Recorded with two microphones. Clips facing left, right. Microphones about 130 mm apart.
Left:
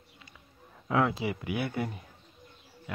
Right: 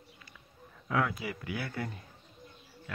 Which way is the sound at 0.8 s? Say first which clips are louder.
Left 4 dB; 25° left (ahead or behind).